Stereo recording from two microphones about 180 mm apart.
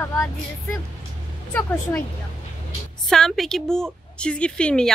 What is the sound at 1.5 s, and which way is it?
Speech, 10° left (ahead or behind).